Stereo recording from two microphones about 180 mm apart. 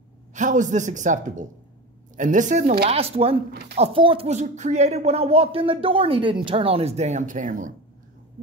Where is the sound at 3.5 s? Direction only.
65° right (ahead or behind).